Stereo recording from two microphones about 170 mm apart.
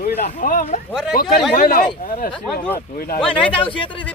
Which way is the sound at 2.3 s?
10° left (ahead or behind).